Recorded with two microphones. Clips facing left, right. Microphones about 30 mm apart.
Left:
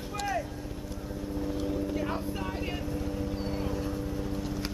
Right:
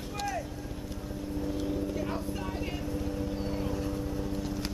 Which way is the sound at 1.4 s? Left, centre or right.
Centre.